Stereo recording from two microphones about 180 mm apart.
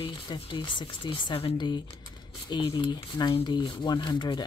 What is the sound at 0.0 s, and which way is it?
Speech, 25° left (ahead or behind).